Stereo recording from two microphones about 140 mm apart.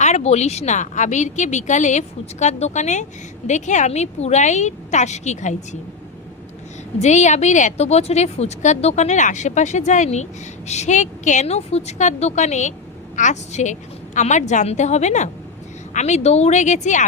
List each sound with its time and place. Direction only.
0.0 s speech: 55° left (ahead or behind)
7.0 s speech: 55° left (ahead or behind)